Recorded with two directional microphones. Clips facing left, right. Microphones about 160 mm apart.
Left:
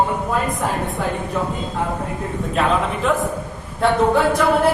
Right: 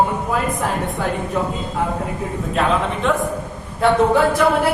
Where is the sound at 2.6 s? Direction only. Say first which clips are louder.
Even; centre (ahead or behind).